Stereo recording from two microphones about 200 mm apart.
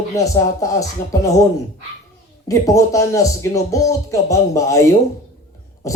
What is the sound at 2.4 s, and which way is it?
A man's voice, 15° left (ahead or behind).